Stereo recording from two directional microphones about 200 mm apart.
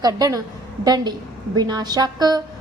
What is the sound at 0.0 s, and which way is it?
A woman's voice, 20° right (ahead or behind).